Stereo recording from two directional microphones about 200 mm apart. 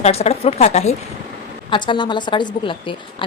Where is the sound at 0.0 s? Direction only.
30° left (ahead or behind).